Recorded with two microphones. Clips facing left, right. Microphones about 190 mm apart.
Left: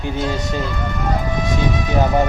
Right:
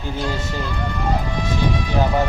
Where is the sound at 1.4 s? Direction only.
20° left (ahead or behind).